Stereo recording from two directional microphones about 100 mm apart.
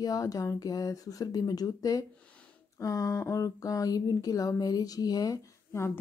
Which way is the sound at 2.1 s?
10° left (ahead or behind).